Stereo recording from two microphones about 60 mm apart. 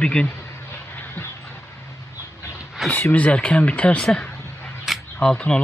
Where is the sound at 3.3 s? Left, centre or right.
Centre.